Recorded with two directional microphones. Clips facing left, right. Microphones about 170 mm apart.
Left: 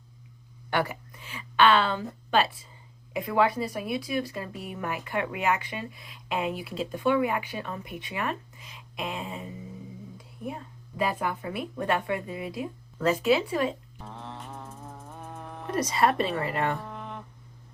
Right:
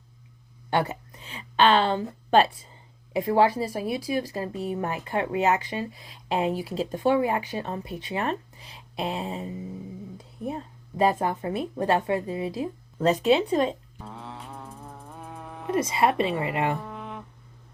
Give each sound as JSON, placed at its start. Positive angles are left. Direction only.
{"t": 0.7, "sound": "a woman's voice", "side_deg": -25}
{"t": 13.1, "sound": "speech", "side_deg": -25}
{"t": 14.0, "sound": "music", "side_deg": 0}
{"t": 15.7, "sound": "speech", "side_deg": -25}
{"t": 16.8, "sound": "a sound", "side_deg": 0}